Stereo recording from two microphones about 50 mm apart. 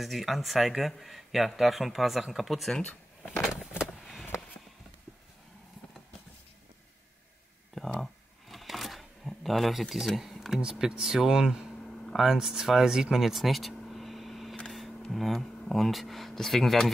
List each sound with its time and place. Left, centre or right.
0.0 s speech: centre
2.8 s a sound: left
4.0 s vehicle: centre
8.0 s shuffling cards: centre
10.0 s speech: centre
10.6 s speech: centre
11.8 s a sound: centre
12.2 s speech: centre
13.8 s vehicle: centre
14.7 s a sound: centre
15.0 s speech: centre